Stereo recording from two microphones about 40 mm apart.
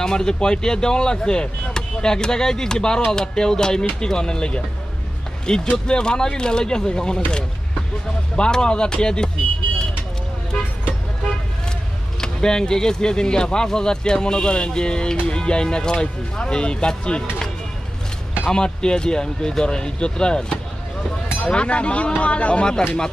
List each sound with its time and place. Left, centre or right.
0.0 s speech: centre
8.4 s speech: left
12.2 s speech: centre
18.4 s speech: centre